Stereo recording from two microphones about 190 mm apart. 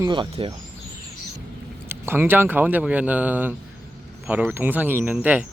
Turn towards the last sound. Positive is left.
turn(degrees=-5)  # may be behind; listen again after turning